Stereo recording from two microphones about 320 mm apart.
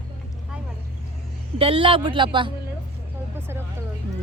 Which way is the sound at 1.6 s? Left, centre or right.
Centre.